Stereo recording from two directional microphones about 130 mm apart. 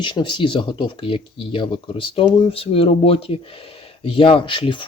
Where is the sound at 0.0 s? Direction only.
35° left (ahead or behind).